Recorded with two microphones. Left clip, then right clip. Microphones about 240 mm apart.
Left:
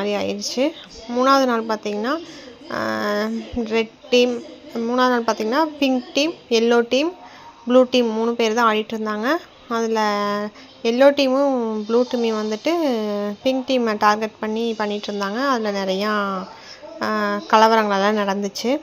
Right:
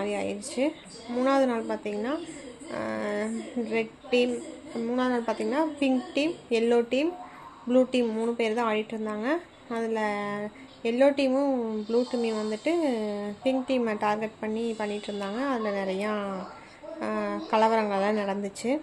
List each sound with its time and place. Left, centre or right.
0.0 s a woman's voice: left